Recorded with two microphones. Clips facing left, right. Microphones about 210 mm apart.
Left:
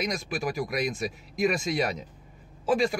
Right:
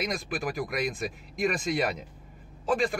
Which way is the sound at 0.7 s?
Centre (ahead or behind).